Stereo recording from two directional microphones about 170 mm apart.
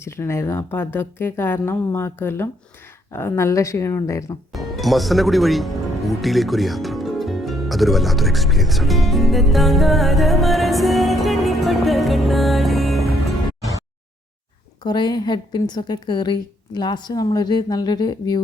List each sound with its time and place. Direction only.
0.0 s speech: 15° left (ahead or behind)
4.5 s speech: centre (ahead or behind)
14.8 s a woman's voice: 25° left (ahead or behind)